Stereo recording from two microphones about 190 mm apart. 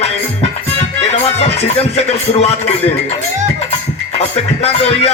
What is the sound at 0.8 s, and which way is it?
Music, 35° left (ahead or behind).